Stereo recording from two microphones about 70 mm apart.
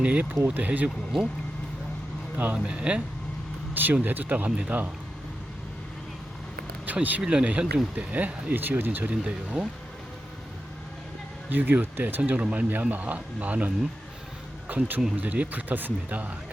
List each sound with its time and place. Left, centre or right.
0.0 s speech: right
2.4 s speech: centre
3.8 s speech: right
6.8 s speech: right
11.4 s speech: right